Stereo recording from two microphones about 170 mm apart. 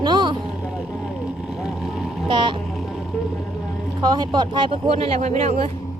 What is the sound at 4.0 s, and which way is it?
Speech, 25° right (ahead or behind).